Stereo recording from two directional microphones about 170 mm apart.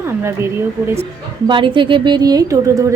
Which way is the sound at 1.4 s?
30° right (ahead or behind).